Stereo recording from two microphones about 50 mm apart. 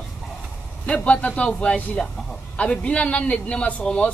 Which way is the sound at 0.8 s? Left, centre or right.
Left.